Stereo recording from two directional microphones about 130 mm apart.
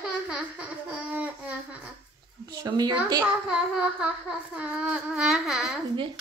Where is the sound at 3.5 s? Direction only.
5° right (ahead or behind).